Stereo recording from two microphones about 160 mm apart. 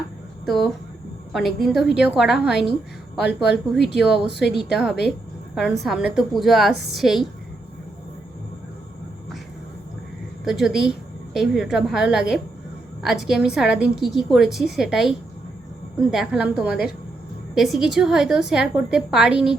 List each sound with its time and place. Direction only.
0.4 s a woman's voice: centre (ahead or behind)
3.2 s speech: 90° left
3.9 s a woman's voice: 5° right (ahead or behind)
4.3 s speech: 90° left
4.5 s a woman's voice: centre (ahead or behind)
10.4 s a woman's voice: 5° right (ahead or behind)